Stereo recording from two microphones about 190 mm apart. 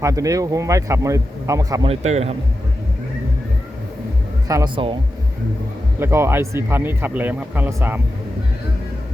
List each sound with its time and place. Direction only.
0.0 s a man's voice: 15° right (ahead or behind)
1.9 s a man's voice: 35° right (ahead or behind)
4.4 s speech: 20° right (ahead or behind)
6.0 s a man's voice: 15° right (ahead or behind)